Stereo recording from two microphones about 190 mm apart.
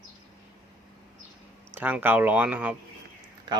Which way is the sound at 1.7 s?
10° right (ahead or behind).